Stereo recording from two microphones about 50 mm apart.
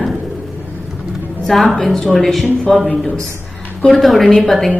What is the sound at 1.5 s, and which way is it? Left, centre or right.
Speech, centre.